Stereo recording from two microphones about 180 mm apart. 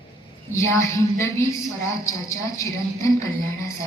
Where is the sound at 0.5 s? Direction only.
15° left (ahead or behind).